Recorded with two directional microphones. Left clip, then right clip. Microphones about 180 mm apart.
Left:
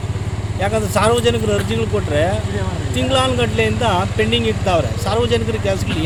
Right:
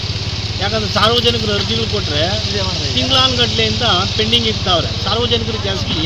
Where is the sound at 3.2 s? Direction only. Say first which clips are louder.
Right 3 dB; 15° left (ahead or behind).